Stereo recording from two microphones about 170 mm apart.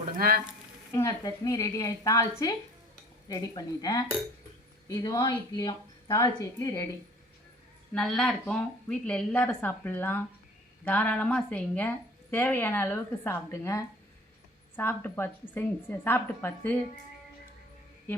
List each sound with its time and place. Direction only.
0.2 s speech: 60° right (ahead or behind)
0.9 s a woman's voice: 20° left (ahead or behind)
7.9 s a woman's voice: 5° left (ahead or behind)